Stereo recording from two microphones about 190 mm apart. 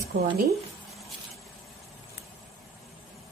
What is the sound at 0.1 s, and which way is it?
Speech, 70° right (ahead or behind).